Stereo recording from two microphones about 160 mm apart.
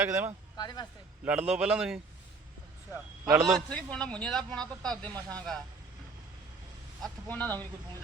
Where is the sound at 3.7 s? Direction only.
5° left (ahead or behind).